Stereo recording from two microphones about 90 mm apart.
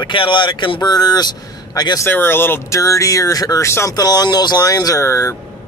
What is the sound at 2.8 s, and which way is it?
Speech, 40° left (ahead or behind).